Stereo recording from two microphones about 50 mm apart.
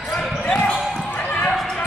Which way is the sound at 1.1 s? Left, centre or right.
Left.